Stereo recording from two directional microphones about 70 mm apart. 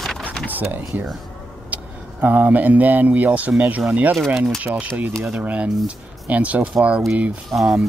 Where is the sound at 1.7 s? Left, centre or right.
Right.